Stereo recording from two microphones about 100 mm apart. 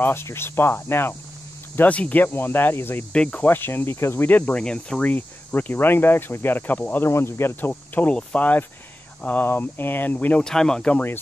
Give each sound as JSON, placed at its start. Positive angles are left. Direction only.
{"t": 0.0, "sound": "speech", "side_deg": 25}